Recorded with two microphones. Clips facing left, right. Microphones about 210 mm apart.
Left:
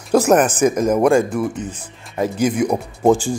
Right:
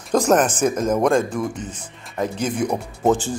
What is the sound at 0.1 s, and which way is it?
Speech, 10° left (ahead or behind).